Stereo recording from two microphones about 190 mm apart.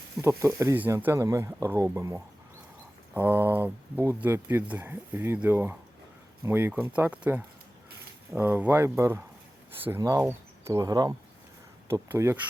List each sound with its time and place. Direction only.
0.2 s speech: 15° right (ahead or behind)